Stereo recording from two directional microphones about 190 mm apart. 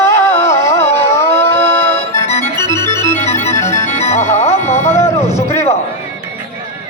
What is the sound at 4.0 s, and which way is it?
Music, 35° left (ahead or behind).